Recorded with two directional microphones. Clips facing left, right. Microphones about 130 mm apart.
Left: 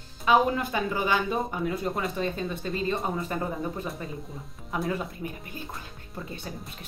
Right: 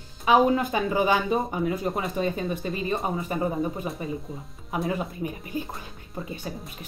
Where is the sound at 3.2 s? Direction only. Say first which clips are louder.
Right 3 dB; 10° right (ahead or behind).